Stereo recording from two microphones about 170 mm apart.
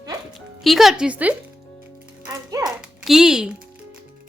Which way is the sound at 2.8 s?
Centre (ahead or behind).